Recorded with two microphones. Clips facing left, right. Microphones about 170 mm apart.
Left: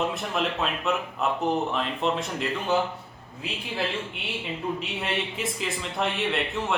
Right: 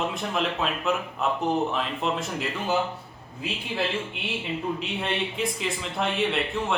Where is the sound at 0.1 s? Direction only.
Centre (ahead or behind).